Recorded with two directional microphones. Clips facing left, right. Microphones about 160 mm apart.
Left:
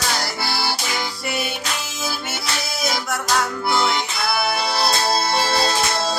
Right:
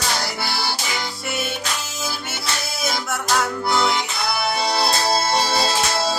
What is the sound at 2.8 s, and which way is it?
Music, centre (ahead or behind).